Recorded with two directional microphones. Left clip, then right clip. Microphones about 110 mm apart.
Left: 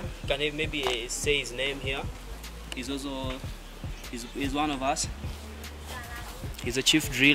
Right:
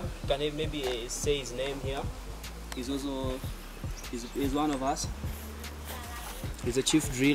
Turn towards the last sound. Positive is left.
turn(degrees=20)  # may be behind; listen again after turning